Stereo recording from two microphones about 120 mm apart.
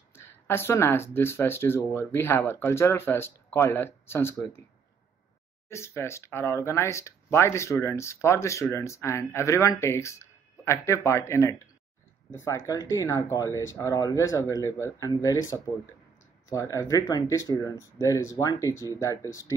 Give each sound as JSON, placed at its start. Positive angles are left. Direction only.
{"t": 0.1, "sound": "speech", "side_deg": 20}
{"t": 5.7, "sound": "speech", "side_deg": 20}